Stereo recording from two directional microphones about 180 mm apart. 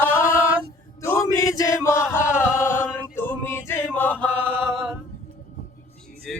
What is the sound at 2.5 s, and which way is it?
Choir, 15° left (ahead or behind).